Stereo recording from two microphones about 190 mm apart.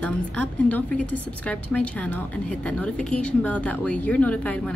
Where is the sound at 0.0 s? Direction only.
10° left (ahead or behind).